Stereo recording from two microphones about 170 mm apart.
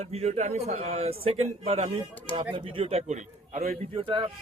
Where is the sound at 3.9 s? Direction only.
30° right (ahead or behind).